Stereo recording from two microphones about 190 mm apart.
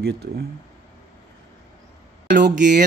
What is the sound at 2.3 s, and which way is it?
Speech, 60° right (ahead or behind).